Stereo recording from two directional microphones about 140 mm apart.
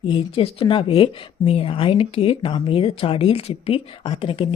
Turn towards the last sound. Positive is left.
turn(degrees=40)  # may be behind; listen again after turning